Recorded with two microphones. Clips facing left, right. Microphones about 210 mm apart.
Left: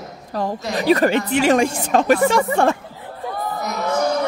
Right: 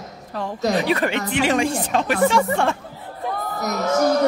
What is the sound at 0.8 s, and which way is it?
Speech, 40° left (ahead or behind).